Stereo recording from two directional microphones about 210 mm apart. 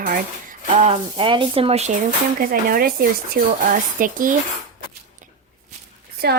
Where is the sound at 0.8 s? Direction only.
30° right (ahead or behind).